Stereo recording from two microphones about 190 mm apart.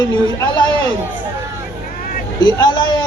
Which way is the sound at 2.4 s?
25° left (ahead or behind).